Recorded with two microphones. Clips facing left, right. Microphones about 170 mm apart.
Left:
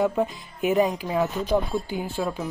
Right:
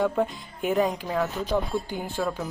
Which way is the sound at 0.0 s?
5° left (ahead or behind).